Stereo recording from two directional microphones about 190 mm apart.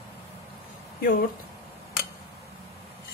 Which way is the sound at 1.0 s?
50° left (ahead or behind).